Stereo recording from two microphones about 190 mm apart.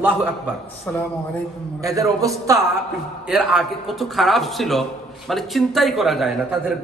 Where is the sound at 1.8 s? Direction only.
15° right (ahead or behind).